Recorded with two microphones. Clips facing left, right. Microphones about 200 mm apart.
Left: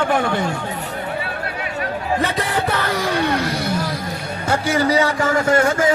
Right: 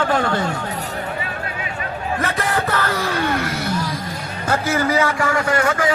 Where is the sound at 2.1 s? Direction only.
15° left (ahead or behind).